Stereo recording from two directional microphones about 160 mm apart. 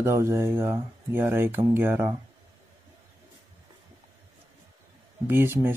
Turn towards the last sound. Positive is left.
turn(degrees=-15)  # may be behind; listen again after turning